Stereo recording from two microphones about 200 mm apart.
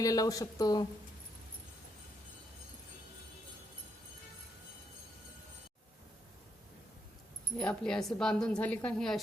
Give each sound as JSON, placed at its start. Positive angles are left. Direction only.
{"t": 0.0, "sound": "speech", "side_deg": 15}
{"t": 7.5, "sound": "speech", "side_deg": 5}